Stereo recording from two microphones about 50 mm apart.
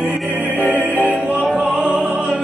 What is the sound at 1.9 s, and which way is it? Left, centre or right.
Opera, centre.